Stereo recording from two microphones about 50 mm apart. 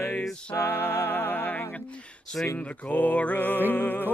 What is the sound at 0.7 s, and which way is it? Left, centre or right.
Music, left.